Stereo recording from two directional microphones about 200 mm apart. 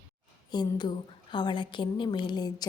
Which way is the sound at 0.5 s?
20° left (ahead or behind).